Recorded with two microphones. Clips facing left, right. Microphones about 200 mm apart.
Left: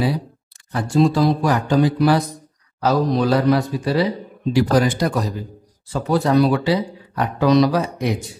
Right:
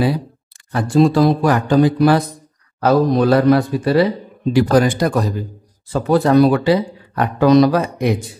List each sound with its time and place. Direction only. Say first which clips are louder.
0.7 s a man's voice: right 3 dB; 65° right (ahead or behind)